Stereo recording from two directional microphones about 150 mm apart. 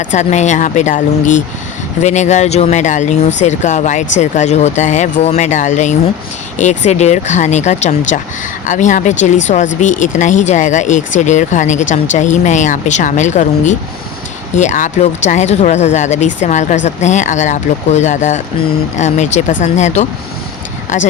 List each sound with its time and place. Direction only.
0.0 s speech: 50° left (ahead or behind)